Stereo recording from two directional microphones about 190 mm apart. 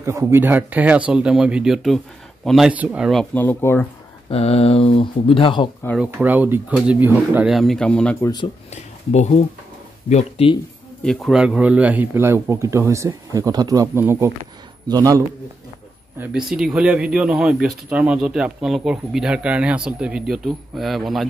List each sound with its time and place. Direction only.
0.0 s a man's voice: 15° right (ahead or behind); by 3.8 s 10° left (ahead or behind)
4.3 s speech: 30° left (ahead or behind)
5.9 s speech: 10° right (ahead or behind); by 8.3 s 5° left (ahead or behind)
9.1 s speech: 35° left (ahead or behind)
11.1 s a man's voice: centre (ahead or behind); by 15.2 s 20° right (ahead or behind)
16.2 s speech: 5° right (ahead or behind)